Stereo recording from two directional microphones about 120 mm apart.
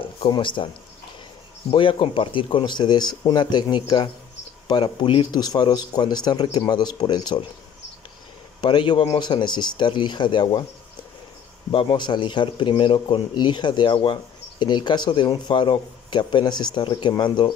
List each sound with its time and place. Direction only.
0.3 s speech: 45° left (ahead or behind)
1.7 s speech: 45° left (ahead or behind)
8.5 s speech: 40° left (ahead or behind)
11.7 s speech: 45° left (ahead or behind)